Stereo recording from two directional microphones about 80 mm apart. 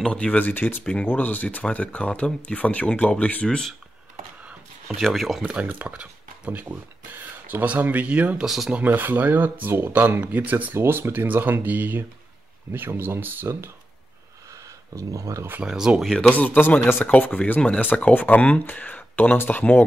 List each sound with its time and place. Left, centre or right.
0.0 s speech: centre
3.4 s speech: centre
4.5 s a sound: centre
5.0 s speech: centre
5.4 s speech: centre
8.5 s speech: centre
8.7 s speech: right
14.5 s a sound: right
15.6 s speech: centre
16.1 s speech: centre